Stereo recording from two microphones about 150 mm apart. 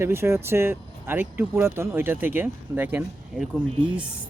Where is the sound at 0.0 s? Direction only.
15° right (ahead or behind).